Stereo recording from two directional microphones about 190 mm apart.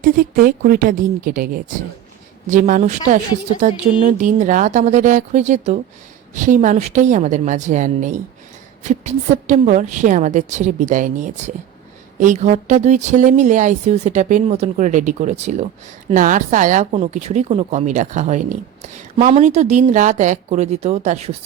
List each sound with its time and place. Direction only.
0.0 s a woman's voice: 50° right (ahead or behind)